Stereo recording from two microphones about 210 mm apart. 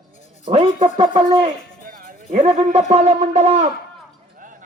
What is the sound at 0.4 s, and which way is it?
Speech, 25° right (ahead or behind).